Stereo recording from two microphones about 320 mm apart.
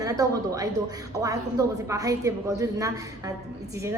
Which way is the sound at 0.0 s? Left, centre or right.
Centre.